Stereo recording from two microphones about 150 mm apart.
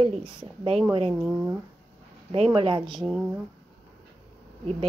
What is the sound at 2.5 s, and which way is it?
Speech, 35° right (ahead or behind).